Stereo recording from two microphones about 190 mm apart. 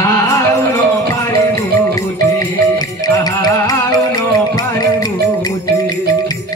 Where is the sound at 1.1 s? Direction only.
15° left (ahead or behind).